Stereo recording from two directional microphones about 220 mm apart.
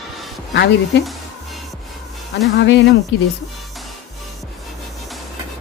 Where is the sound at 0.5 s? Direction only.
50° left (ahead or behind).